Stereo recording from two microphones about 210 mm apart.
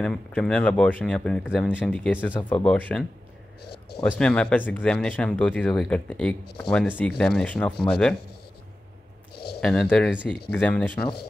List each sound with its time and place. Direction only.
0.0 s speech: 5° left (ahead or behind)
4.2 s speech: 5° left (ahead or behind)
9.3 s a sound: 50° left (ahead or behind)
9.6 s speech: 5° left (ahead or behind)